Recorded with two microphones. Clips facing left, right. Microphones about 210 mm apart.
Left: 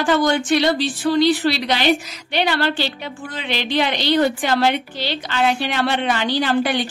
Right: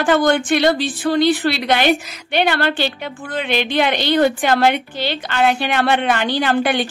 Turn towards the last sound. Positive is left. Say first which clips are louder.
# right 1 dB
turn(degrees=-55)  # may be behind; listen again after turning